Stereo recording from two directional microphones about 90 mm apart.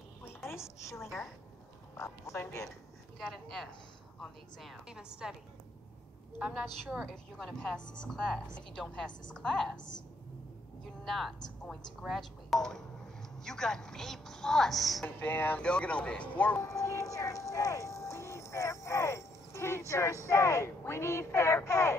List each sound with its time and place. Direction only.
0.5 s a woman's voice: 30° left (ahead or behind)
2.0 s speech: 35° left (ahead or behind)
3.2 s a woman's voice: centre (ahead or behind)
6.9 s a woman's voice: 10° right (ahead or behind)
7.3 s a woman's voice: 5° left (ahead or behind)
11.1 s a woman's voice: centre (ahead or behind)
15.0 s speech: 20° left (ahead or behind)
16.6 s a sound: 35° left (ahead or behind)
19.9 s speech: 35° left (ahead or behind)